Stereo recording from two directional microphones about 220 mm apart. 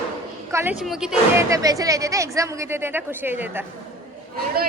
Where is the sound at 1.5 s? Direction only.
15° right (ahead or behind).